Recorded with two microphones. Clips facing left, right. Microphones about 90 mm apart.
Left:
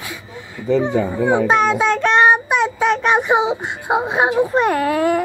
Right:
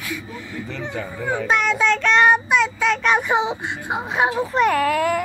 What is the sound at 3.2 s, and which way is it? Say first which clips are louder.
Whimper: left 4 dB; 20° left (ahead or behind).